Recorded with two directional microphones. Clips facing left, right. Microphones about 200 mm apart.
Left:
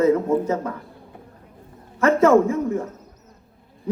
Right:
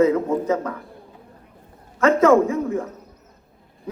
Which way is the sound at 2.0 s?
15° right (ahead or behind).